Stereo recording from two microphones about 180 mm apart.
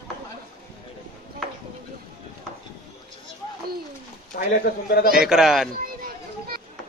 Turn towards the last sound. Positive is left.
turn(degrees=0)  # may be behind; listen again after turning